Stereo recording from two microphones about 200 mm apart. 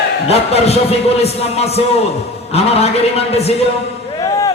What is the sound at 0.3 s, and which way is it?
Speech, 30° left (ahead or behind).